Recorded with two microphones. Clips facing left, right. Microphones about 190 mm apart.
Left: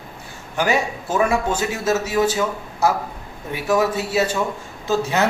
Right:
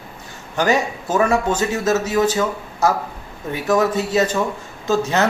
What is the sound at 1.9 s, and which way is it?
A man's voice, 10° left (ahead or behind).